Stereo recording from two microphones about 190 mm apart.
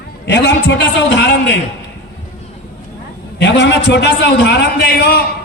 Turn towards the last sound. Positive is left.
turn(degrees=60)  # may be behind; listen again after turning